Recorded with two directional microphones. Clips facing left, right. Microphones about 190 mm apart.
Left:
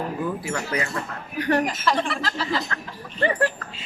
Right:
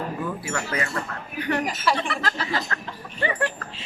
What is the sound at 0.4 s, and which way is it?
Speech, 20° left (ahead or behind).